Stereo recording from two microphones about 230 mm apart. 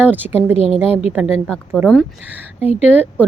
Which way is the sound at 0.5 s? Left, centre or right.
Left.